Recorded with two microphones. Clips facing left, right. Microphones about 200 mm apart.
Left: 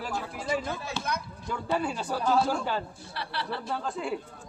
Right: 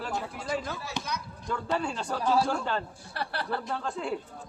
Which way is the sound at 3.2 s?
50° right (ahead or behind).